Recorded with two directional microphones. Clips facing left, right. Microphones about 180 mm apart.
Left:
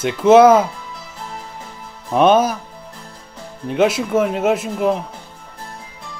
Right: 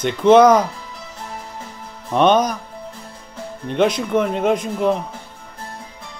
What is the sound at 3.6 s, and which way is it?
Speech, 5° left (ahead or behind).